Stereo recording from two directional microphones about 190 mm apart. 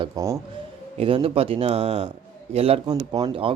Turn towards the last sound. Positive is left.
turn(degrees=-30)  # may be behind; listen again after turning